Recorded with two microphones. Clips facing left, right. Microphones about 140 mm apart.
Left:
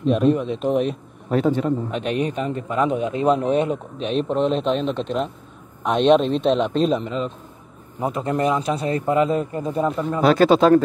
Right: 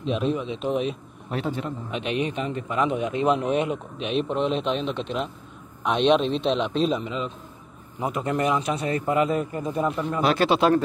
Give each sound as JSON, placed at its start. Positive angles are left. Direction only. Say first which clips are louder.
{"t": 0.0, "sound": "a man's voice", "louder": "left 7 dB", "side_deg": 50}
{"t": 8.0, "sound": "a man's voice", "louder": "left 3 dB", "side_deg": 30}